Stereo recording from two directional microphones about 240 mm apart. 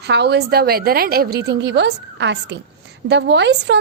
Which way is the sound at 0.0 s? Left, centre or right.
Right.